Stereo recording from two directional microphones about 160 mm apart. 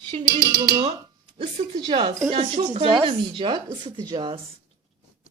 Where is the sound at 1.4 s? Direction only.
30° right (ahead or behind).